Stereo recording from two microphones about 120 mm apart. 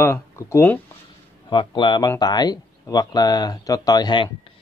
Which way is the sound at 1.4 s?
40° left (ahead or behind).